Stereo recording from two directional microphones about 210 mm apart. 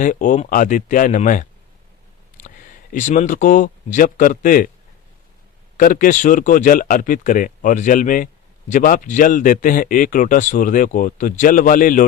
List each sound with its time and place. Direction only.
0.0 s speech: 40° left (ahead or behind)
2.9 s speech: 35° left (ahead or behind)
5.7 s speech: 40° left (ahead or behind)